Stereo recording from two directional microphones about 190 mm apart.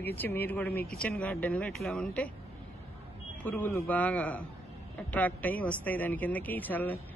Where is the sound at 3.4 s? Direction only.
10° left (ahead or behind).